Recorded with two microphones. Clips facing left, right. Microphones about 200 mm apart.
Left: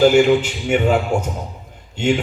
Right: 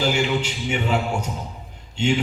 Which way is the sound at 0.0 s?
50° left (ahead or behind).